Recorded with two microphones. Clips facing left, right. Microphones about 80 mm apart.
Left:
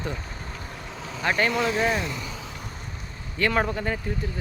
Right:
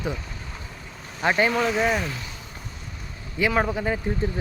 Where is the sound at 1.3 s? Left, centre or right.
Centre.